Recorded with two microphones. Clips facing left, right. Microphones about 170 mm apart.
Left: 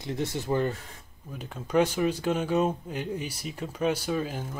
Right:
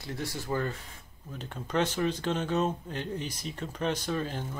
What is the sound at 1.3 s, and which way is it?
Speech, 10° left (ahead or behind).